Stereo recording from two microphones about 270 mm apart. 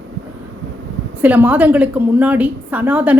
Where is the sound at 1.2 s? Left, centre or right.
Centre.